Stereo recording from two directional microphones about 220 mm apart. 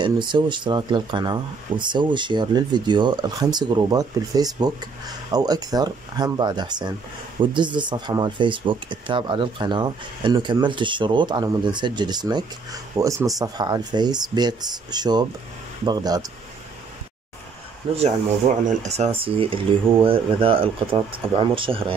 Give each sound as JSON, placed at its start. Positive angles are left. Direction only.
{"t": 0.0, "sound": "speech", "side_deg": -20}
{"t": 17.9, "sound": "speech", "side_deg": -30}